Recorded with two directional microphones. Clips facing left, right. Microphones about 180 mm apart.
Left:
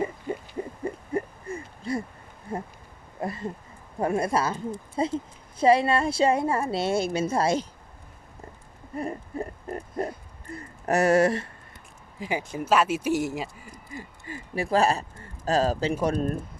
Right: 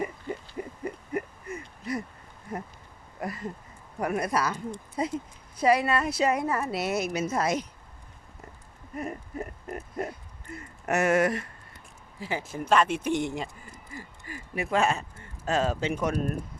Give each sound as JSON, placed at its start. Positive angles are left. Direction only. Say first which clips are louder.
{"t": 0.9, "sound": "owl", "louder": "left 3 dB", "side_deg": 30}
{"t": 2.5, "sound": "a woman's voice", "louder": "left 3 dB", "side_deg": 30}
{"t": 9.0, "sound": "oink", "louder": "left 3 dB", "side_deg": 30}
{"t": 10.5, "sound": "a sound", "louder": "left 3 dB", "side_deg": 35}
{"t": 12.2, "sound": "speech", "louder": "left 3 dB", "side_deg": 15}
{"t": 13.9, "sound": "a sound", "louder": "left 3 dB", "side_deg": 25}